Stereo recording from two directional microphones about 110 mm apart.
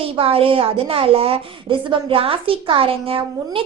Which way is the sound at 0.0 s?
60° right (ahead or behind).